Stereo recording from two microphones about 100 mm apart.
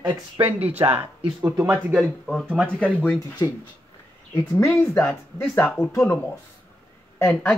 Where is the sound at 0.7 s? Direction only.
90° right.